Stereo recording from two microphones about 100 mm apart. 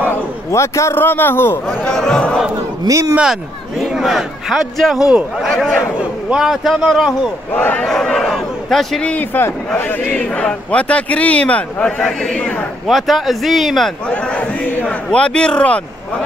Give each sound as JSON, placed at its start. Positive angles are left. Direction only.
{"t": 0.1, "sound": "a man's voice", "side_deg": 30}
{"t": 1.9, "sound": "a man's voice", "side_deg": 5}
{"t": 2.9, "sound": "speech", "side_deg": -30}
{"t": 3.2, "sound": "a man's voice", "side_deg": -5}
{"t": 7.5, "sound": "a man's voice", "side_deg": 20}
{"t": 7.8, "sound": "a man's voice", "side_deg": 5}
{"t": 9.1, "sound": "a man's voice", "side_deg": 20}
{"t": 12.8, "sound": "a man's voice", "side_deg": 0}